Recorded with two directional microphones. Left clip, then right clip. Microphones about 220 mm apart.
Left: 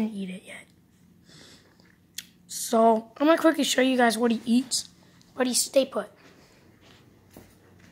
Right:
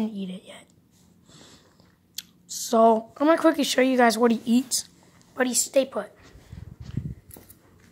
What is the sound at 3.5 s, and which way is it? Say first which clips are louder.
Speech: right 2 dB; 5° right (ahead or behind).